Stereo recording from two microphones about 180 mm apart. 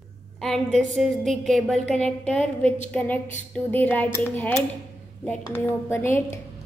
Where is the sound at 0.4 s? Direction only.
5° left (ahead or behind).